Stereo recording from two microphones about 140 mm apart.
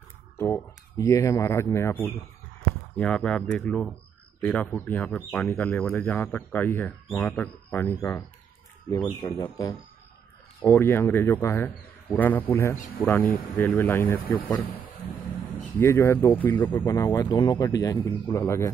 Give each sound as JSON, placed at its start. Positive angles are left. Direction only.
{"t": 0.4, "sound": "speech", "side_deg": 20}
{"t": 3.0, "sound": "speech", "side_deg": 5}
{"t": 8.9, "sound": "speech", "side_deg": 30}
{"t": 10.6, "sound": "speech", "side_deg": 20}
{"t": 12.7, "sound": "speech", "side_deg": 70}
{"t": 13.1, "sound": "speech", "side_deg": 15}
{"t": 15.8, "sound": "speech", "side_deg": 20}
{"t": 16.7, "sound": "speech", "side_deg": 25}